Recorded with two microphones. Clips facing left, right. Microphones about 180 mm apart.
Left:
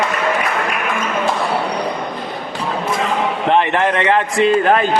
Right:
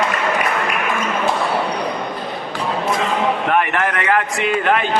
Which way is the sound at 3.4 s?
25° left (ahead or behind).